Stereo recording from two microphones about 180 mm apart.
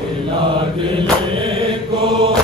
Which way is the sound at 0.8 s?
30° right (ahead or behind).